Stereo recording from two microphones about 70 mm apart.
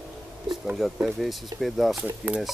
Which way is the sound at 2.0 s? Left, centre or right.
Right.